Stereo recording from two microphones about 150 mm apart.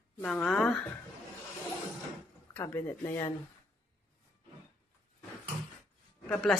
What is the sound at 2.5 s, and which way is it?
Speech, 15° left (ahead or behind).